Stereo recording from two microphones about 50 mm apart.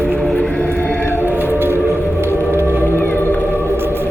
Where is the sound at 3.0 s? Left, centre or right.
Left.